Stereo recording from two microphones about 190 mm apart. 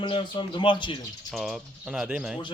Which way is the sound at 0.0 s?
25° left (ahead or behind).